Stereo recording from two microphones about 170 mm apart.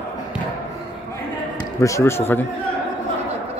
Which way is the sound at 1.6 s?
20° left (ahead or behind).